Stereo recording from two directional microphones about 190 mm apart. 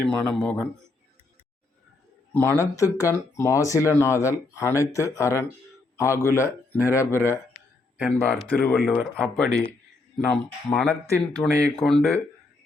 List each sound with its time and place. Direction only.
0.0 s speech: 5° left (ahead or behind)
2.3 s speech: 10° left (ahead or behind)
7.9 s speech: 5° right (ahead or behind)
11.3 s speech: 5° left (ahead or behind)